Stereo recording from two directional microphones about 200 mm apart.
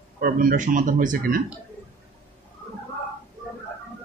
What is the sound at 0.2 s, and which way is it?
Speech, 45° right (ahead or behind).